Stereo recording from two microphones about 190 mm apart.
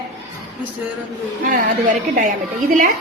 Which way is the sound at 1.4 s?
45° right (ahead or behind).